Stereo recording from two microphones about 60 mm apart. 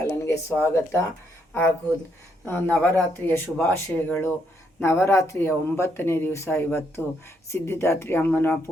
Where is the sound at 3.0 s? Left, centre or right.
Left.